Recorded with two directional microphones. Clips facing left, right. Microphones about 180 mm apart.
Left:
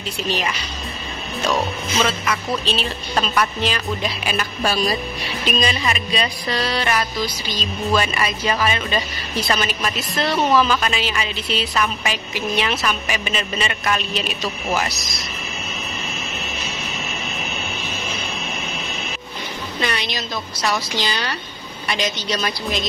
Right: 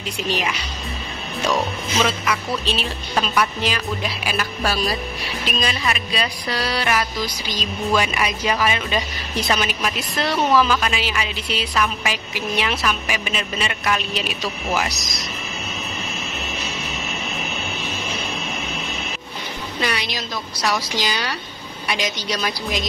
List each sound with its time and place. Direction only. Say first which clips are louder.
2.0 s a woman's voice: even; 10° right (ahead or behind)
19.8 s a woman's voice: even; 5° right (ahead or behind)